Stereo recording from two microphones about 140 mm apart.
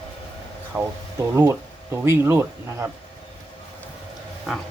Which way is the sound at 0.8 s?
15° right (ahead or behind).